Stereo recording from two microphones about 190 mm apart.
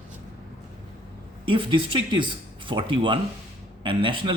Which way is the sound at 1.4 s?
25° right (ahead or behind).